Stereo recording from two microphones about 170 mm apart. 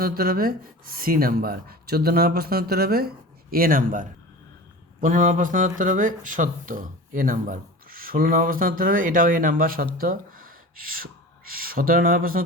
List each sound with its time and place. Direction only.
0.0 s speech: 60° right (ahead or behind)